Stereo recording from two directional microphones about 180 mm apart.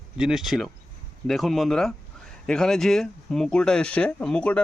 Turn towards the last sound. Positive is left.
turn(degrees=5)  # may be behind; listen again after turning